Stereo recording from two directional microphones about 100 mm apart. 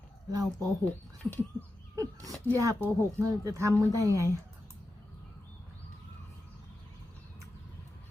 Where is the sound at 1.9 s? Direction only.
35° right (ahead or behind).